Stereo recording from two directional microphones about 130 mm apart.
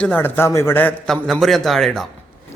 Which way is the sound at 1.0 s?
Centre (ahead or behind).